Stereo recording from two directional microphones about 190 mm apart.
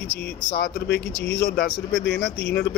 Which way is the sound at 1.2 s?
60° left (ahead or behind).